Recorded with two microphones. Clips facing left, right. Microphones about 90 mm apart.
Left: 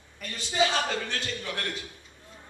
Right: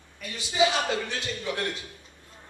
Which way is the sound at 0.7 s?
15° right (ahead or behind).